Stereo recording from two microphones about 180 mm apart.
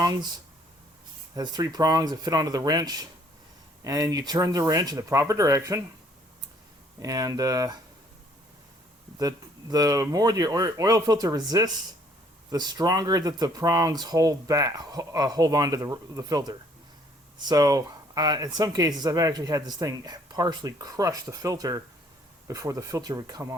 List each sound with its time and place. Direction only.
0.0 s speech: 20° right (ahead or behind)
1.4 s speech: 20° right (ahead or behind)
7.0 s speech: 20° right (ahead or behind)
9.1 s speech: 20° right (ahead or behind)